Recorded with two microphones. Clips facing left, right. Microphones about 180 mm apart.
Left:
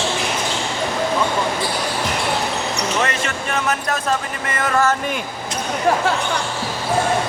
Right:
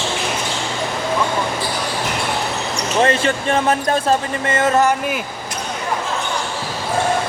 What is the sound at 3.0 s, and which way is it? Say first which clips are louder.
Basketball bounce: right 6 dB; 30° right (ahead or behind).